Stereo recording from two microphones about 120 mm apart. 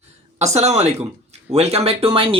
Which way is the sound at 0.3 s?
70° right (ahead or behind).